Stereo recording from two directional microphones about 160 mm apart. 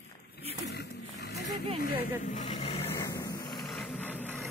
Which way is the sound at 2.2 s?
50° left (ahead or behind).